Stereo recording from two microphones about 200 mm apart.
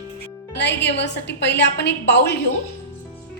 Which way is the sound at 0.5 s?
60° left (ahead or behind).